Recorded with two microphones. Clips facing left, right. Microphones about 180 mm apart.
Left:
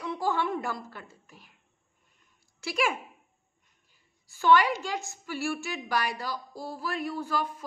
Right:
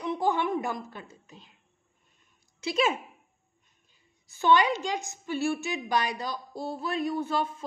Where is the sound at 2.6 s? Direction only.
20° right (ahead or behind).